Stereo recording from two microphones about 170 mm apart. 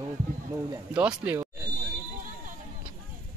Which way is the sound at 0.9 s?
5° right (ahead or behind).